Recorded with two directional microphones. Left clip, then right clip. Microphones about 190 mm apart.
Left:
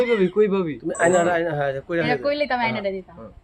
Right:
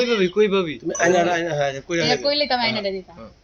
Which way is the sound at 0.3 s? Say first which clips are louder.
Right 1 dB; 55° left (ahead or behind).